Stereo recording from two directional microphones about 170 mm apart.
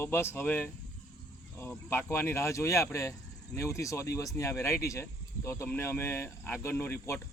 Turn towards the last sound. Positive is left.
turn(degrees=15)  # may be behind; listen again after turning